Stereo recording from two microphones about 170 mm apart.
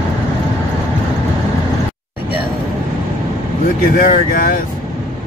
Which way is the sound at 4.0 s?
60° left (ahead or behind).